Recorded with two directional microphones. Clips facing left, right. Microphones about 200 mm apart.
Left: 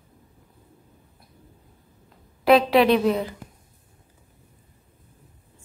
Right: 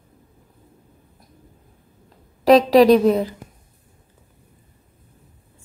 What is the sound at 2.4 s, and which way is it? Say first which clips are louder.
Speech: right 5 dB; 40° right (ahead or behind).